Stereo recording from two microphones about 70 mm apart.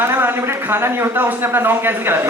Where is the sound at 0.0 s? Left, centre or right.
Right.